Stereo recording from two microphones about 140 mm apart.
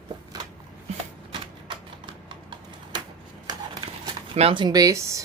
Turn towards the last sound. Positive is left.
turn(degrees=-25)  # may be behind; listen again after turning